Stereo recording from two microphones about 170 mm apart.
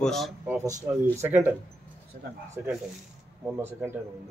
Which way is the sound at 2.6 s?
15° right (ahead or behind).